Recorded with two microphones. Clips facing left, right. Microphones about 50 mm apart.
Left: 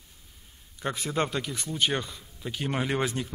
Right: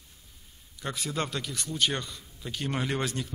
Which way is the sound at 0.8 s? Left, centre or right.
Left.